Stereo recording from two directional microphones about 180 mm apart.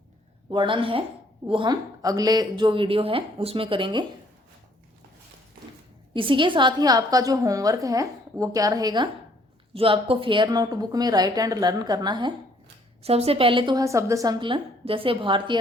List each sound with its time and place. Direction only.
0.5 s a woman's voice: 25° right (ahead or behind)
6.1 s a woman's voice: 30° right (ahead or behind)